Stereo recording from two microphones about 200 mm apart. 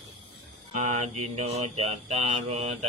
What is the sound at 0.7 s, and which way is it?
Mantra, 35° right (ahead or behind).